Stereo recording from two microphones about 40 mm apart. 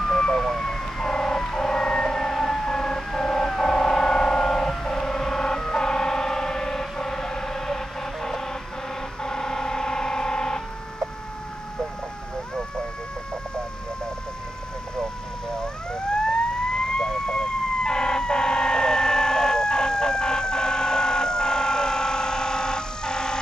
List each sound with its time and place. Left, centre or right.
0.0 s emergency vehicle: centre
5.6 s siren: centre
9.2 s vehicle: centre
15.6 s emergency vehicle: centre